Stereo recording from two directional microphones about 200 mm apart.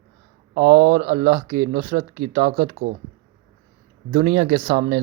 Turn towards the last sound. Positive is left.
turn(degrees=-35)  # may be behind; listen again after turning